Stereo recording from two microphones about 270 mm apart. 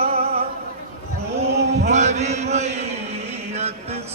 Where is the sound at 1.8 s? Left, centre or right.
Right.